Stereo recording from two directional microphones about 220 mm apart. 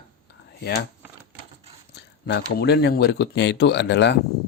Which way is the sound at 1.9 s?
50° left (ahead or behind).